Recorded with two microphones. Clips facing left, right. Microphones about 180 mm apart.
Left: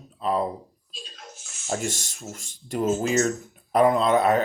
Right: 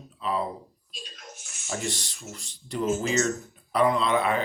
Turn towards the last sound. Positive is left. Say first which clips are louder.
# left 5 dB
turn(degrees=40)  # may be behind; listen again after turning